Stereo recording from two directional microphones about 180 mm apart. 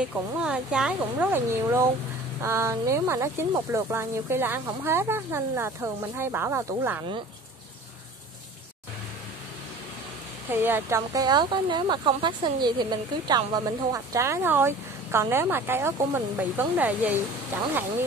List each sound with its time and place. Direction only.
0.1 s speech: 5° right (ahead or behind)
10.5 s speech: 10° right (ahead or behind)